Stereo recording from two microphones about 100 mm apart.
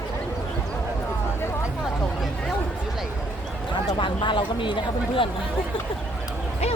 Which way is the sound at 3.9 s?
50° left (ahead or behind).